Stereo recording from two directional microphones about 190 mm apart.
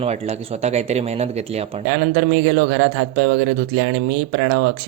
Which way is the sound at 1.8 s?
65° right (ahead or behind).